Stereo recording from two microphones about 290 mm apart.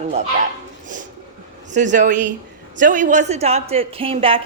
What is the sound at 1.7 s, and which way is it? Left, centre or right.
A woman's voice, right.